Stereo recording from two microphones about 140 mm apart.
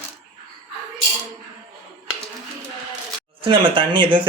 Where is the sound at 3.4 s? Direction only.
35° right (ahead or behind).